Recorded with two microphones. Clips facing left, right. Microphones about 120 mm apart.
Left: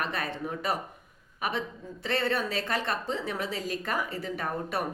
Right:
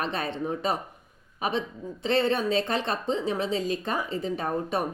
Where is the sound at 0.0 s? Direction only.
25° right (ahead or behind).